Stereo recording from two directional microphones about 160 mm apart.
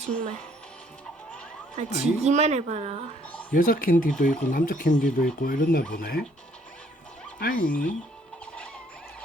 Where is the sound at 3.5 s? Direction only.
60° left (ahead or behind).